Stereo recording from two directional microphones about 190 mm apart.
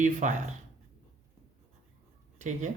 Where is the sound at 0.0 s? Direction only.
40° right (ahead or behind).